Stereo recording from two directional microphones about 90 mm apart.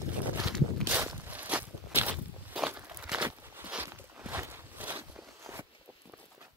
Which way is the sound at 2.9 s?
10° right (ahead or behind).